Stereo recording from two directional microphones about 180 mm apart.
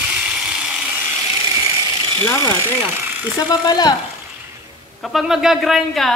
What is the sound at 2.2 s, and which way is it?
Speech, 15° left (ahead or behind).